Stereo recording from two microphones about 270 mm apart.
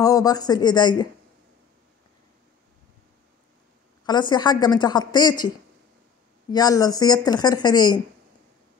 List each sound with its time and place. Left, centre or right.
0.0 s a woman's voice: centre
4.0 s a woman's voice: centre
6.5 s a woman's voice: centre